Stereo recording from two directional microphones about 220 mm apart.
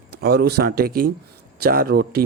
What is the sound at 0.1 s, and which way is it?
Speech, 45° right (ahead or behind).